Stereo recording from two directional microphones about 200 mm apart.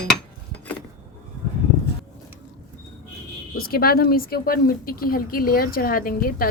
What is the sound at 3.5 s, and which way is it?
Speech, 50° left (ahead or behind).